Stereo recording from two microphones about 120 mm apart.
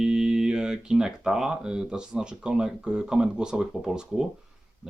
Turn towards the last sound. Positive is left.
turn(degrees=-5)  # may be behind; listen again after turning